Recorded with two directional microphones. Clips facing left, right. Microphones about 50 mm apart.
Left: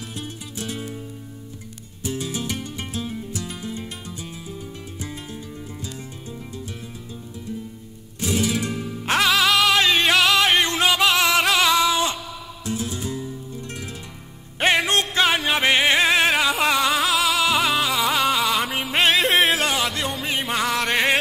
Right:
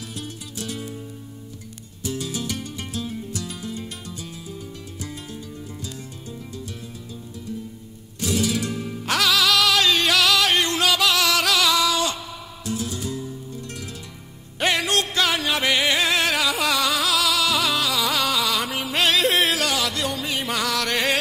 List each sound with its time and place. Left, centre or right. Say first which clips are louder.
0.1 s music: left 1 dB; left
2.0 s music: left 1 dB; left
8.2 s music: even; left